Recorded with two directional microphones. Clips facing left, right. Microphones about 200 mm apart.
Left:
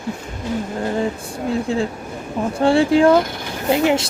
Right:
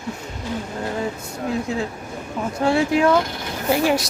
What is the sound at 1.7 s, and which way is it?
A woman's voice, 30° left (ahead or behind).